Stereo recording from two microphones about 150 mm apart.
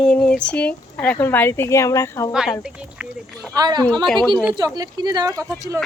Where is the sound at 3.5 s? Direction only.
25° right (ahead or behind).